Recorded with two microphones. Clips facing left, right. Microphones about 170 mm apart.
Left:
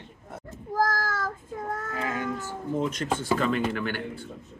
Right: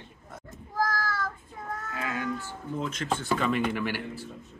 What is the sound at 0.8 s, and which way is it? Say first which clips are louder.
Child singing: left 3 dB; 45° left (ahead or behind).